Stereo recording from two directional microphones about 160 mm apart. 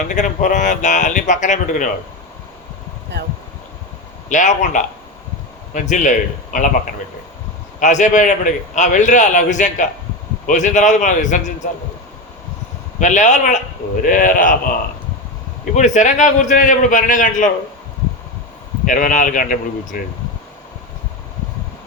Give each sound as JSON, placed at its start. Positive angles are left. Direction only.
{"t": 0.1, "sound": "a man's voice", "side_deg": 50}
{"t": 3.1, "sound": "speech", "side_deg": -90}
{"t": 4.3, "sound": "a man's voice", "side_deg": 50}
{"t": 7.8, "sound": "a man's voice", "side_deg": 50}
{"t": 13.0, "sound": "a man's voice", "side_deg": 50}
{"t": 15.7, "sound": "a man's voice", "side_deg": 50}
{"t": 18.9, "sound": "speech", "side_deg": 55}